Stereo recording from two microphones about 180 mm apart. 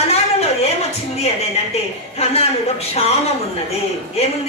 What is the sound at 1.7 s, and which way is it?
Speech, 35° left (ahead or behind).